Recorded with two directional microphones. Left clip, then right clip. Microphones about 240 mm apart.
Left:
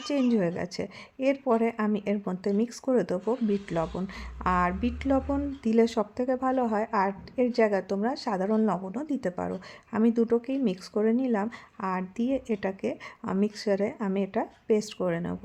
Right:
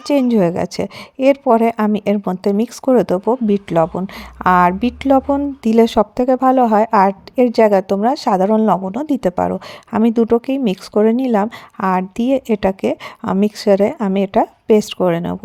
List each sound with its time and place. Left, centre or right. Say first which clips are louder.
0.0 s a woman's voice: right 12 dB; right